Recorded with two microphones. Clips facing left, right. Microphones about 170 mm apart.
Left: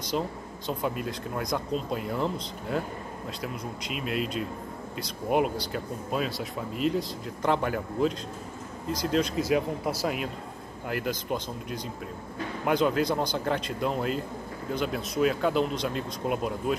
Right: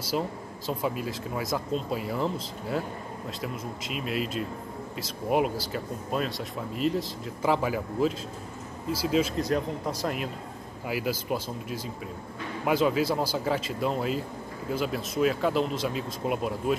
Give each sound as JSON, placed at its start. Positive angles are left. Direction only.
{"t": 0.1, "sound": "speech", "side_deg": -5}
{"t": 9.5, "sound": "speech", "side_deg": 5}